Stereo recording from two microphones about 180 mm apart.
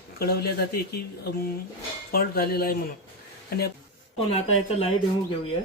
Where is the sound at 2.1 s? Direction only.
55° left (ahead or behind).